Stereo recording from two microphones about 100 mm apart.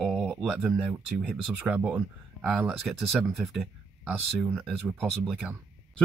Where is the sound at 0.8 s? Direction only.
10° right (ahead or behind).